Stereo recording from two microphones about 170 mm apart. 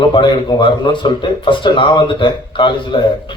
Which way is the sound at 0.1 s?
30° left (ahead or behind).